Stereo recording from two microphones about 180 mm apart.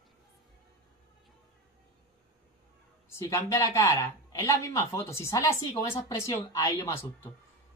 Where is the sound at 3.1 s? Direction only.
15° left (ahead or behind).